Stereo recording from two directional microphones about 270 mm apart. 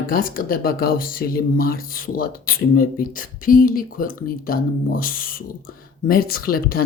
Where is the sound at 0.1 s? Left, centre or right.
Left.